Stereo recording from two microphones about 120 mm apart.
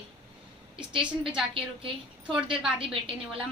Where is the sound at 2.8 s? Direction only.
50° right (ahead or behind).